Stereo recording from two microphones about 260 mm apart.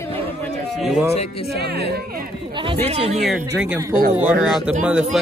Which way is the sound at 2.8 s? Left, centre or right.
Right.